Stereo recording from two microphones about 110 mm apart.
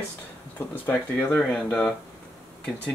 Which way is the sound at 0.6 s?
15° left (ahead or behind).